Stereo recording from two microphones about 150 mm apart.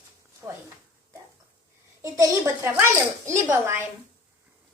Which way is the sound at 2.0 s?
20° right (ahead or behind).